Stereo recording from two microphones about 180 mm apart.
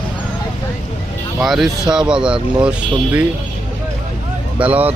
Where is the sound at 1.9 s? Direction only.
5° right (ahead or behind).